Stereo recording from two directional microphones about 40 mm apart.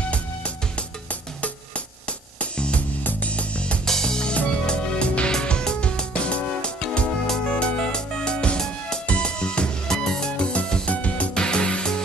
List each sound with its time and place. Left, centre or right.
2.5 s music: left
3.8 s music: centre
9.8 s music: centre
10.4 s music: left
11.3 s music: left